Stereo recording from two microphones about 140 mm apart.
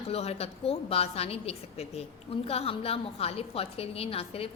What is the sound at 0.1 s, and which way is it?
A woman's voice, 45° left (ahead or behind).